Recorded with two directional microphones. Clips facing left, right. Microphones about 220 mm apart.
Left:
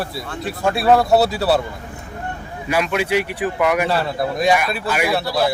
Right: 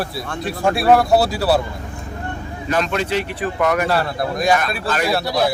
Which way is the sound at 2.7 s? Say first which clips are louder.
Left 1 dB; 10° left (ahead or behind).